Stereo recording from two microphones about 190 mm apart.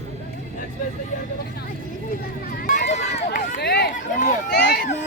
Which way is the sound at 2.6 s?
40° left (ahead or behind).